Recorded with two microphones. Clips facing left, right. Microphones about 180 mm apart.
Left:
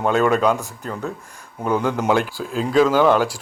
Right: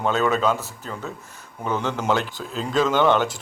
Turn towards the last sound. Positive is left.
turn(degrees=5)  # may be behind; listen again after turning